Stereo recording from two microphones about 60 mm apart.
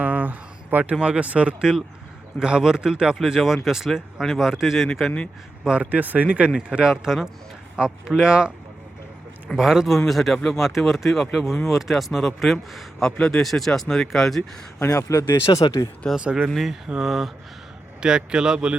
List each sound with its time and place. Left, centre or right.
0.0 s a sound: right
0.9 s speech: centre
5.6 s a man's voice: centre
9.6 s a man's voice: centre
13.1 s a man's voice: centre
14.8 s speech: left
15.5 s speech: left
16.1 s speech: centre
17.0 s a man's voice: centre
18.0 s speech: centre